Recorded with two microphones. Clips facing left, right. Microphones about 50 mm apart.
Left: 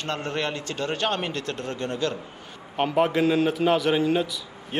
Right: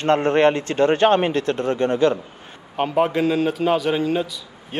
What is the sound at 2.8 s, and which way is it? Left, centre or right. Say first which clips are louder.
Speech: right 2 dB; centre.